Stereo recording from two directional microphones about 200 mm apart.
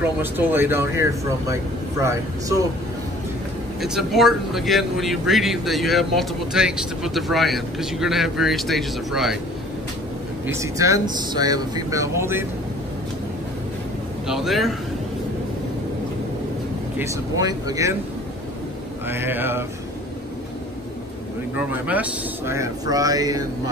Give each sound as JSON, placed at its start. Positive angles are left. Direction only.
{"t": 0.0, "sound": "speech", "side_deg": -10}
{"t": 3.8, "sound": "a man's voice", "side_deg": 0}
{"t": 10.4, "sound": "speech", "side_deg": -15}
{"t": 14.2, "sound": "a man's voice", "side_deg": 0}
{"t": 17.1, "sound": "speech", "side_deg": -20}
{"t": 19.0, "sound": "speech", "side_deg": -10}
{"t": 21.8, "sound": "speech", "side_deg": -5}